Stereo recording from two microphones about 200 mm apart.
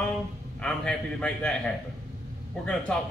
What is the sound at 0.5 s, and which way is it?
Speech, 5° left (ahead or behind).